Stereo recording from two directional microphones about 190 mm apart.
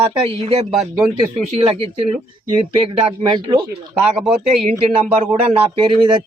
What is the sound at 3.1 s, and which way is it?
Speech, 25° right (ahead or behind).